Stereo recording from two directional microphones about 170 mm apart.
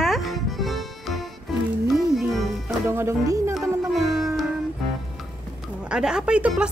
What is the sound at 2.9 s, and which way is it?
Speech, 15° right (ahead or behind).